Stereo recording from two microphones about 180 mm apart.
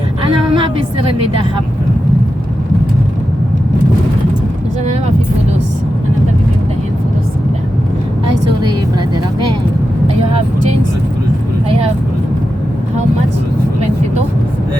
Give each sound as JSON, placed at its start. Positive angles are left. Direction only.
{"t": 0.5, "sound": "a woman's voice", "side_deg": -30}